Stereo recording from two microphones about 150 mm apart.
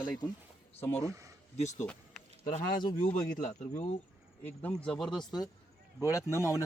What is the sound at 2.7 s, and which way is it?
Speech, 70° left (ahead or behind).